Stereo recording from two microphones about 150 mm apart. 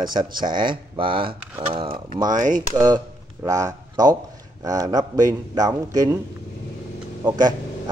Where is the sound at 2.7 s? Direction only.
20° right (ahead or behind).